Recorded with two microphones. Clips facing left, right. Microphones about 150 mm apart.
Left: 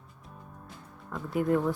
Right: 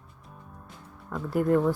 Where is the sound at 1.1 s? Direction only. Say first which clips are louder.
Right 3 dB; centre (ahead or behind).